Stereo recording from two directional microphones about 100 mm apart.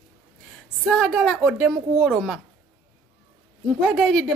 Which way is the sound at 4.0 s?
5° left (ahead or behind).